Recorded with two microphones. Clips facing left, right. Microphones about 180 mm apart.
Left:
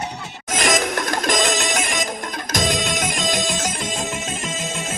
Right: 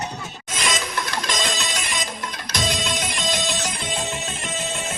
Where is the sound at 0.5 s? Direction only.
45° left (ahead or behind).